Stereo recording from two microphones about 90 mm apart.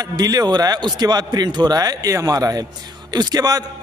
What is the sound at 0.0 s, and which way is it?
A man's voice, 45° right (ahead or behind).